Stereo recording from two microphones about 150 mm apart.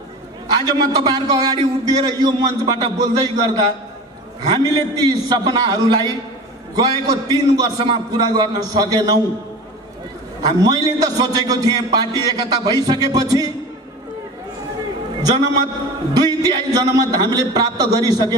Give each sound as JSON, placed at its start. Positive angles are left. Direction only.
{"t": 0.5, "sound": "a man's voice", "side_deg": -25}
{"t": 10.6, "sound": "a man's voice", "side_deg": -25}
{"t": 16.1, "sound": "a man's voice", "side_deg": -25}